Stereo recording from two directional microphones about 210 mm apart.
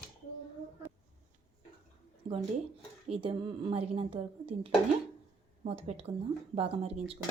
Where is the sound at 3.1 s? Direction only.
25° right (ahead or behind).